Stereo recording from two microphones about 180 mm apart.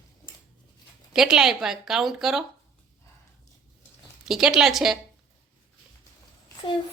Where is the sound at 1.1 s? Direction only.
5° right (ahead or behind).